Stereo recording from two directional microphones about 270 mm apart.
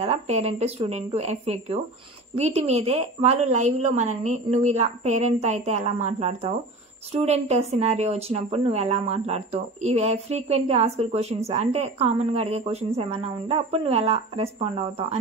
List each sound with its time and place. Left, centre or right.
0.0 s speech: right